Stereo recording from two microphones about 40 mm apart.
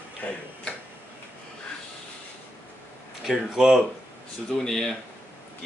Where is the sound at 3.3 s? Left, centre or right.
Centre.